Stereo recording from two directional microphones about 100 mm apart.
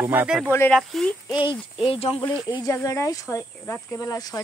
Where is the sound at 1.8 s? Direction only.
70° left (ahead or behind).